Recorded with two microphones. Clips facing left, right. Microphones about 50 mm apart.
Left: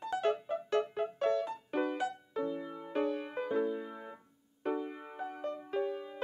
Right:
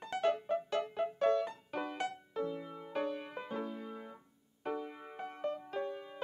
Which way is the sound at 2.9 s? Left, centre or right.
Left.